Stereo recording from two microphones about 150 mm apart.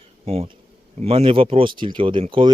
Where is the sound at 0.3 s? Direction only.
40° right (ahead or behind).